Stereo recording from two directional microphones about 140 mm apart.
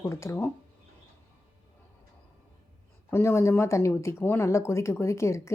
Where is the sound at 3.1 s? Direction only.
20° left (ahead or behind).